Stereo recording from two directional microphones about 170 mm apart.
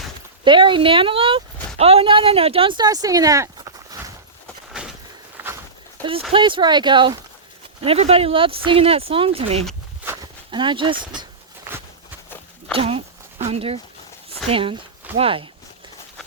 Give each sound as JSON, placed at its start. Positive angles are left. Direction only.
{"t": 0.4, "sound": "speech", "side_deg": -30}
{"t": 5.4, "sound": "a sound", "side_deg": -10}
{"t": 6.0, "sound": "speech", "side_deg": 10}
{"t": 6.3, "sound": "speech", "side_deg": -30}
{"t": 10.1, "sound": "walk", "side_deg": -25}
{"t": 12.7, "sound": "speech", "side_deg": -35}